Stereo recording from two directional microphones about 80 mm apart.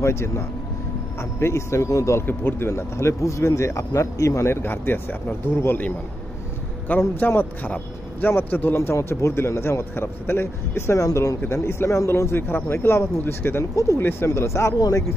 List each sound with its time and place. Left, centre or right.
0.0 s speech: left
2.2 s speech: left
11.4 s speech: left